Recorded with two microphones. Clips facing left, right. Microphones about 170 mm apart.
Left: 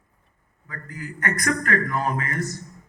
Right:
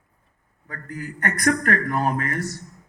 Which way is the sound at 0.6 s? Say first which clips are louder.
Right 3 dB; 60° right (ahead or behind).